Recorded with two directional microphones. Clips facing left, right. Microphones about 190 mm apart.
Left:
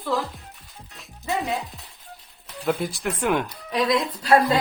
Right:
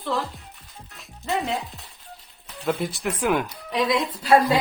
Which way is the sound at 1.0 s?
Centre (ahead or behind).